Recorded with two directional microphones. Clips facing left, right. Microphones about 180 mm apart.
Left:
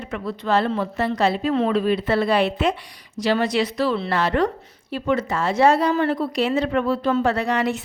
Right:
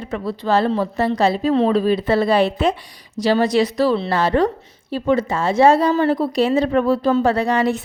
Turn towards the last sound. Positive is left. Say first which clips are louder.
# right 4 dB
turn(degrees=-35)  # may be behind; listen again after turning